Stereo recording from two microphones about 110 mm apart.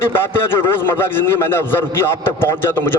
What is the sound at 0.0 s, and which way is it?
A man's voice, 20° left (ahead or behind).